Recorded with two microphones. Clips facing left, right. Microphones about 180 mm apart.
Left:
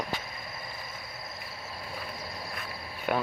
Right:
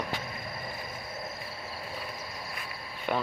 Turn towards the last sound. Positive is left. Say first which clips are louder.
# left 1 dB
turn(degrees=5)  # may be behind; listen again after turning